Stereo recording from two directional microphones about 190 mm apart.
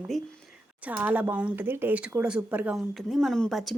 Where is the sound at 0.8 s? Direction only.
10° right (ahead or behind).